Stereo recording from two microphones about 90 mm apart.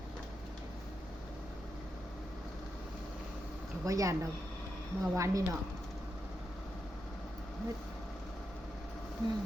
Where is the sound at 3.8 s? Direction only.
35° right (ahead or behind).